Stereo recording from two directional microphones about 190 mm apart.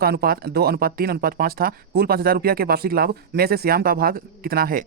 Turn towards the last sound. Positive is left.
turn(degrees=-50)  # may be behind; listen again after turning